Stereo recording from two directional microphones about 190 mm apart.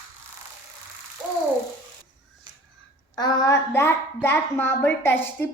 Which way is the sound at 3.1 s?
20° left (ahead or behind).